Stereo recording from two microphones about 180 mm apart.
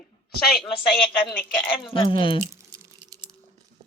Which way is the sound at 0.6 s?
5° left (ahead or behind).